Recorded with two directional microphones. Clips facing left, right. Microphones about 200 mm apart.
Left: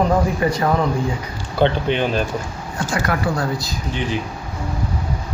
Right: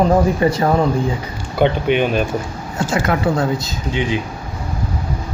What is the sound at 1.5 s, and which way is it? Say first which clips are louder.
Speech: right 2 dB; 15° right (ahead or behind).